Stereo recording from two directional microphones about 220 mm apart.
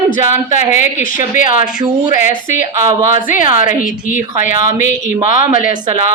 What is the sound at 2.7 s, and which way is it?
Speech, 15° right (ahead or behind).